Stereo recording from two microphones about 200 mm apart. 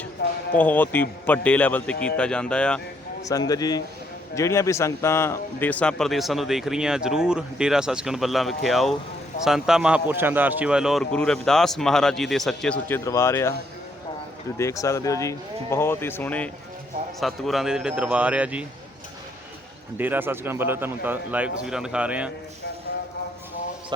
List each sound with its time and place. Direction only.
0.2 s basketball bounce: 60° left (ahead or behind)
0.5 s speech: 10° left (ahead or behind)
3.2 s speech: 20° left (ahead or behind)
14.6 s speech: 15° left (ahead or behind); by 18.6 s 5° right (ahead or behind)
20.0 s speech: 10° right (ahead or behind)